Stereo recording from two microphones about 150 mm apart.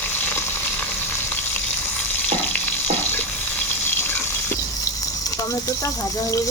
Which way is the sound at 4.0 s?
15° left (ahead or behind).